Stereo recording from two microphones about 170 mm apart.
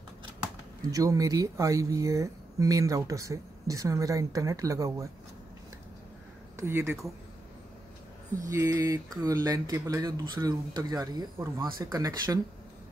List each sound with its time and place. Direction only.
0.8 s speech: 20° right (ahead or behind)
6.6 s speech: 15° right (ahead or behind)
8.4 s speech: 20° right (ahead or behind)